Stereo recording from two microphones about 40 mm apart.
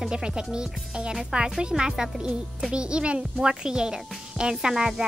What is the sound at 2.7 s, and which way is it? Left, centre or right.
A child's voice, right.